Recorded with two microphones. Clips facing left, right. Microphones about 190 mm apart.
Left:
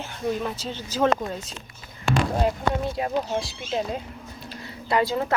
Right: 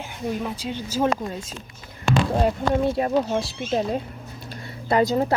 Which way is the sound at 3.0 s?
45° right (ahead or behind).